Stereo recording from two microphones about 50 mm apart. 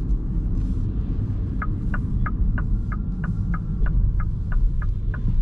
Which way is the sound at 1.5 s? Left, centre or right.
Centre.